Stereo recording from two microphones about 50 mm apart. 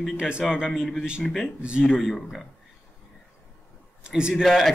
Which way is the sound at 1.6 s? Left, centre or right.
Centre.